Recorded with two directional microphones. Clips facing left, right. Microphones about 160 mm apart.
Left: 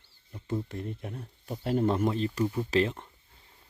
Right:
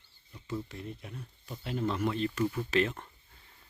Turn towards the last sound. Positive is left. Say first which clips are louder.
# left 3 dB
turn(degrees=25)  # may be behind; listen again after turning